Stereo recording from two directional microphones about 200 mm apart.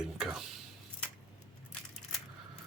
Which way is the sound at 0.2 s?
Centre (ahead or behind).